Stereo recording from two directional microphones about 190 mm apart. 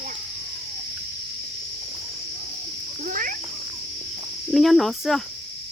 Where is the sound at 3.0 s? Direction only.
45° right (ahead or behind).